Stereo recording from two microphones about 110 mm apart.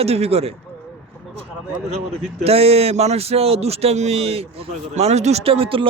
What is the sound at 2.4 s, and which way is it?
Speech, 65° right (ahead or behind).